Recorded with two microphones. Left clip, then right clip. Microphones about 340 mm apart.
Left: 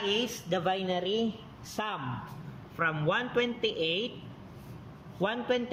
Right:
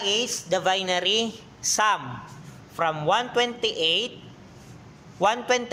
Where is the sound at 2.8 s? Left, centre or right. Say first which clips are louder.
Right 6 dB; centre.